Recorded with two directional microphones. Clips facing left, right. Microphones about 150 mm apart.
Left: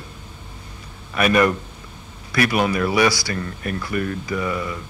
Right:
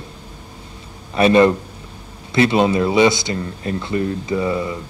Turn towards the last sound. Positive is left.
turn(degrees=-25)  # may be behind; listen again after turning